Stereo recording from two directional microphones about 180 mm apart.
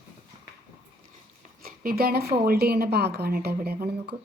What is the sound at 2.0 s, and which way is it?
A woman's voice, 60° right (ahead or behind).